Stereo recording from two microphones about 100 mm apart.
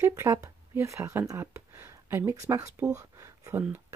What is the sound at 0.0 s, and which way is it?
Speech, 30° right (ahead or behind).